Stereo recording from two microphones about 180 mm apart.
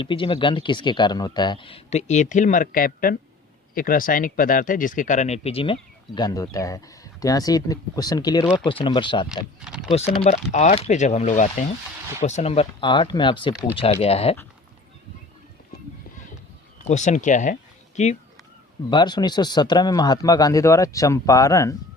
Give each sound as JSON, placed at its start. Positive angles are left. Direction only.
{"t": 0.0, "sound": "speech", "side_deg": 30}
{"t": 6.1, "sound": "speech", "side_deg": 20}
{"t": 9.3, "sound": "speech", "side_deg": -5}
{"t": 10.2, "sound": "speech", "side_deg": 40}
{"t": 16.8, "sound": "speech", "side_deg": 40}
{"t": 18.9, "sound": "speech", "side_deg": 25}